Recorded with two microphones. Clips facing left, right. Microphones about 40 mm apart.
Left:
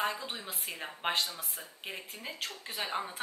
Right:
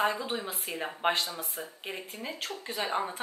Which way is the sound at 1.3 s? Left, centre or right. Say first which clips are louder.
Right 6 dB; centre.